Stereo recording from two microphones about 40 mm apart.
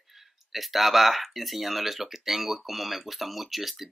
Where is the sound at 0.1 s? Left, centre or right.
Centre.